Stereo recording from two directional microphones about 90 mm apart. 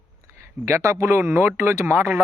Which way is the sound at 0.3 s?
30° right (ahead or behind).